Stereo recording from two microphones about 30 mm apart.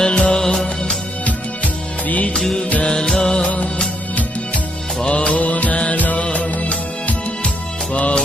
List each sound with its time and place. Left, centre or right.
0.0 s music: left
0.3 s music: centre
1.2 s music: left
2.8 s music: left
3.4 s music: left
5.0 s music: left
5.4 s music: left
5.7 s music: left
6.0 s music: left
6.3 s music: left